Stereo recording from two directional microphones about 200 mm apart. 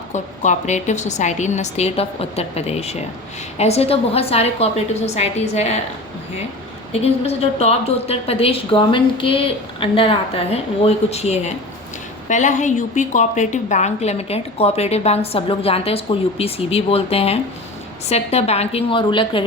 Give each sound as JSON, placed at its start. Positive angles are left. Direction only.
{"t": 0.1, "sound": "a woman's voice", "side_deg": 35}
{"t": 6.9, "sound": "a woman's voice", "side_deg": 30}